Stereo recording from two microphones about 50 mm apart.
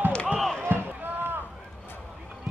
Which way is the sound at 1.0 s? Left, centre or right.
Right.